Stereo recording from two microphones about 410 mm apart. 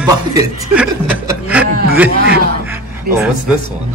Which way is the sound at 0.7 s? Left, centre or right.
Centre.